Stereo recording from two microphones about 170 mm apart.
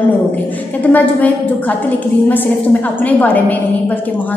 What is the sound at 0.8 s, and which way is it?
A woman's voice, 10° left (ahead or behind).